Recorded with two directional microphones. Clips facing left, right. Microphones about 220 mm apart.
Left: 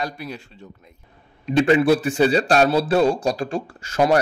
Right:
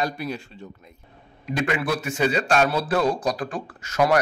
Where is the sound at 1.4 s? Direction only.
30° left (ahead or behind).